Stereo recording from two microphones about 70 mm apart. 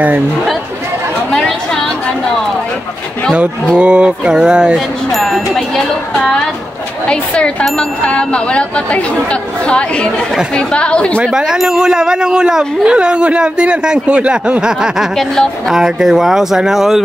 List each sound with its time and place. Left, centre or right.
3.7 s speech: centre
4.7 s speech: centre
7.1 s speech: centre
11.3 s speech: centre
15.1 s speech: centre
15.7 s speech: centre